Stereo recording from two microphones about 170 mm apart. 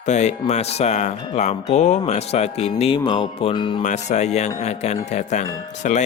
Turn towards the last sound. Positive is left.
turn(degrees=45)  # may be behind; listen again after turning